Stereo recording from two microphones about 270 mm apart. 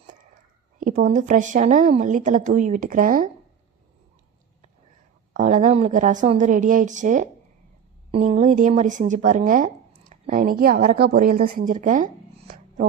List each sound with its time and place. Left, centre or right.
0.8 s a woman's voice: right
5.3 s a woman's voice: right